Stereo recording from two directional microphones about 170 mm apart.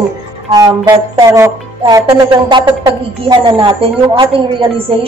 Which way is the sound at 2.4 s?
30° right (ahead or behind).